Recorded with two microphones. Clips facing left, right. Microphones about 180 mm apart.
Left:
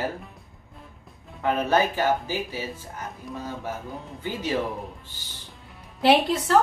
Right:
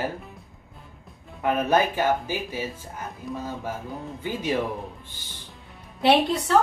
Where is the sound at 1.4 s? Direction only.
15° right (ahead or behind).